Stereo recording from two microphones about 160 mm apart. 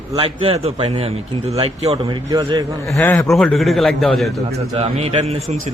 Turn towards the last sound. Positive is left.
turn(degrees=-40)  # may be behind; listen again after turning